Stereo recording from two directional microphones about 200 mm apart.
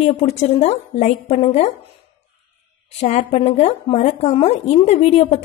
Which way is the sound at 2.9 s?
30° left (ahead or behind).